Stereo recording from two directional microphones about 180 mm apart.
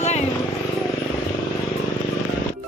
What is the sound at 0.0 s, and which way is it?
Vehicle, 40° left (ahead or behind).